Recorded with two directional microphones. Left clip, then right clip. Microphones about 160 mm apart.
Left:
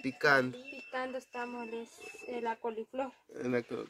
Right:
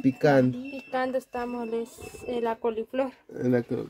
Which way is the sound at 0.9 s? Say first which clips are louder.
Right 10 dB; 30° left (ahead or behind).